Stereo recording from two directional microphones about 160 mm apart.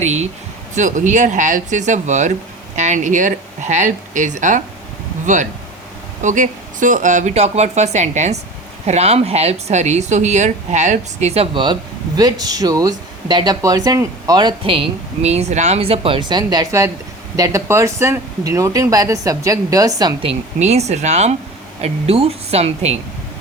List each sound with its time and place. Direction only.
0.0 s a woman's voice: 45° right (ahead or behind); by 20.1 s 25° right (ahead or behind)
20.2 s a woman's voice: 45° right (ahead or behind)